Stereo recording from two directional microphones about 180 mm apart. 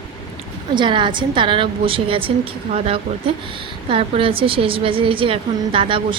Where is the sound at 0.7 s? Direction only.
25° right (ahead or behind).